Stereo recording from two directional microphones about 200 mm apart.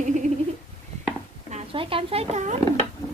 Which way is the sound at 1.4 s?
30° right (ahead or behind).